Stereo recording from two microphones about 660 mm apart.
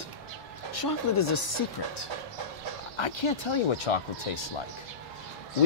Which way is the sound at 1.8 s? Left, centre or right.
Left.